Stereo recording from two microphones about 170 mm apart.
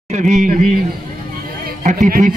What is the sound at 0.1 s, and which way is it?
Speech, 45° right (ahead or behind).